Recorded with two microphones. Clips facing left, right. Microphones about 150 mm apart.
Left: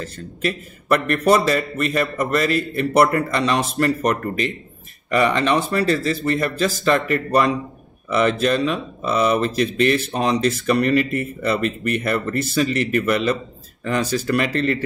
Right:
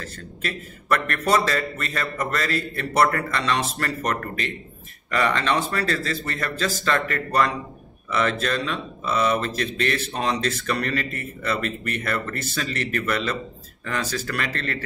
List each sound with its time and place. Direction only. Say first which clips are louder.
0.0 s speech: left 7 dB; 20° left (ahead or behind)